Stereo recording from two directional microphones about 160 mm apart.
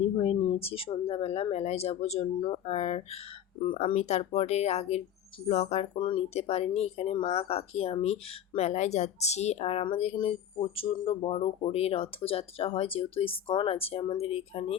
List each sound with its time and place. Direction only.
0.0 s speech: 40° left (ahead or behind)